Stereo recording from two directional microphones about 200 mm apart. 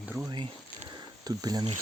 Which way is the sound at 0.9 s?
20° right (ahead or behind).